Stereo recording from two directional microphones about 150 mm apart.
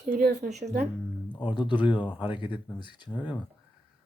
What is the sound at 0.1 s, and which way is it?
Speech, 90° right.